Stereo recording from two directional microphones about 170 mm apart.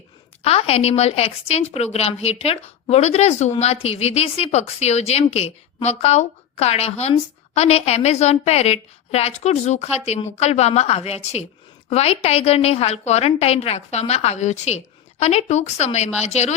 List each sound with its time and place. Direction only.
0.4 s speech: 35° left (ahead or behind)